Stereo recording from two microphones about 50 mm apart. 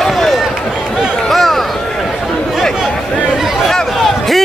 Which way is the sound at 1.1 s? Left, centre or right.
Centre.